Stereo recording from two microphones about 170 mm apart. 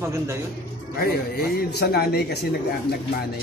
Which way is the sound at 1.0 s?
65° left (ahead or behind).